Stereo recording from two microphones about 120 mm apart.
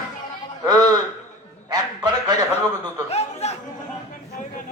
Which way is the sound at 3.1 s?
60° left (ahead or behind).